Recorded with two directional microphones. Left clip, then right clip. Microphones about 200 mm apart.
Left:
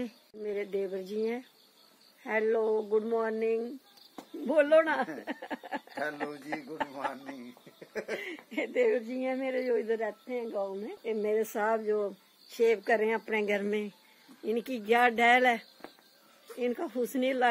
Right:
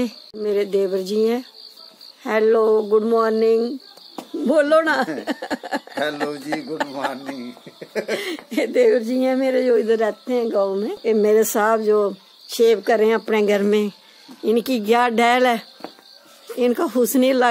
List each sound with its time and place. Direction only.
0.0 s speech: 5° right (ahead or behind)
8.3 s speech: 10° right (ahead or behind)